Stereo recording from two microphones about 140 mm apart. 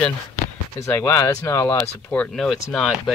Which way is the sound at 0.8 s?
20° left (ahead or behind).